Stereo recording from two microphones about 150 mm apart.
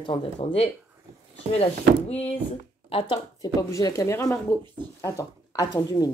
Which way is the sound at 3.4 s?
25° left (ahead or behind).